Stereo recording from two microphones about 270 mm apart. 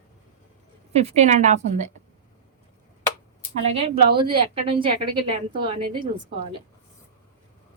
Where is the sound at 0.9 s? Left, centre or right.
Right.